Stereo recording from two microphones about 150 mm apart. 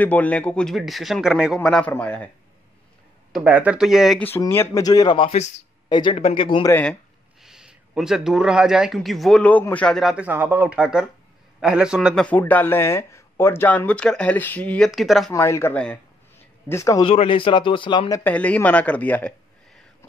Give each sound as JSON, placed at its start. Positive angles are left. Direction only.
{"t": 0.0, "sound": "speech", "side_deg": 10}
{"t": 3.3, "sound": "speech", "side_deg": -10}
{"t": 4.4, "sound": "speech", "side_deg": 20}
{"t": 7.4, "sound": "speech", "side_deg": -5}
{"t": 12.3, "sound": "speech", "side_deg": 10}
{"t": 14.9, "sound": "speech", "side_deg": 0}
{"t": 15.3, "sound": "speech", "side_deg": 20}
{"t": 17.0, "sound": "speech", "side_deg": 40}
{"t": 18.2, "sound": "speech", "side_deg": 10}